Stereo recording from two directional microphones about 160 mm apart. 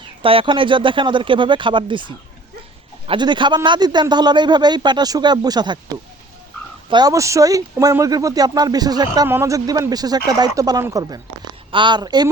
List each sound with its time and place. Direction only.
0.2 s a man's voice: 35° right (ahead or behind)
6.9 s a man's voice: 20° right (ahead or behind)